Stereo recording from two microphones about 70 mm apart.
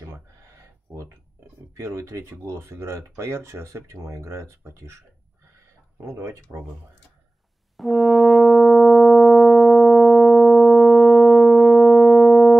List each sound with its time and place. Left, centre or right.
1.8 s speech: right
6.0 s speech: right
7.7 s brass instrument: centre